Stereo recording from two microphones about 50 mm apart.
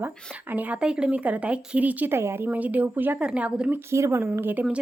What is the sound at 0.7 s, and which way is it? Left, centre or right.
Speech, centre.